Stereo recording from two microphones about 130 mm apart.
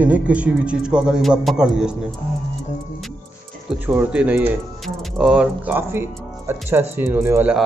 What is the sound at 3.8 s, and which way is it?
Speech, 10° right (ahead or behind).